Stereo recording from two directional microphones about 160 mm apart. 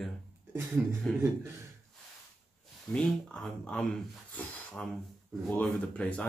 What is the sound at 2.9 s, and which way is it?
Speech, 5° left (ahead or behind).